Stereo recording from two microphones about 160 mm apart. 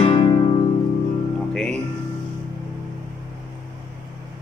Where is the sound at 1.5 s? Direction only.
5° left (ahead or behind).